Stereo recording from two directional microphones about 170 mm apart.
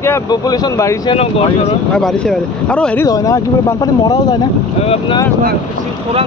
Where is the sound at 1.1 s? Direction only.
35° left (ahead or behind).